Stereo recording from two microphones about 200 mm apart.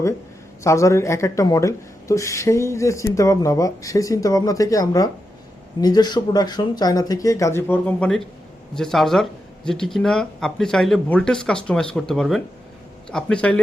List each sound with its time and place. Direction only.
0.6 s speech: 15° left (ahead or behind)